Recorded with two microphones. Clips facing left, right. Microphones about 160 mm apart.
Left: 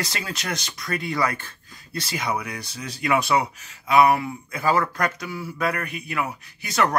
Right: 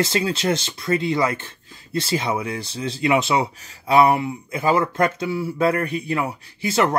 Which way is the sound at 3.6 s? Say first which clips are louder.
Right 2 dB; 35° right (ahead or behind).